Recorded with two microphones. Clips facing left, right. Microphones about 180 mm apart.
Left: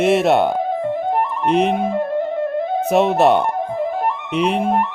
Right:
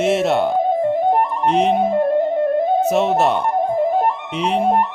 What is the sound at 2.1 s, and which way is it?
Music, 45° right (ahead or behind).